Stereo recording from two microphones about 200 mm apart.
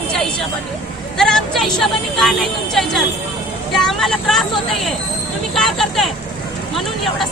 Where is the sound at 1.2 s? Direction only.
Centre (ahead or behind).